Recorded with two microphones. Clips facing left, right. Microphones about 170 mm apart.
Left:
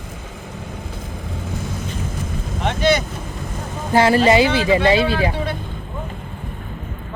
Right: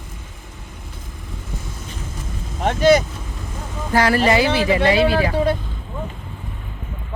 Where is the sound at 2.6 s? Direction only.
40° right (ahead or behind).